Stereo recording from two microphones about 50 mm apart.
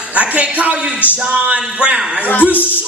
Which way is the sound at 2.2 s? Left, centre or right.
Left.